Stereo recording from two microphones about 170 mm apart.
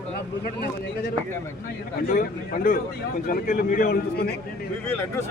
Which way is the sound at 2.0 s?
55° left (ahead or behind).